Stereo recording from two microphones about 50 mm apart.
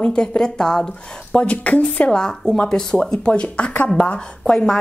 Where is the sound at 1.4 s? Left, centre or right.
Left.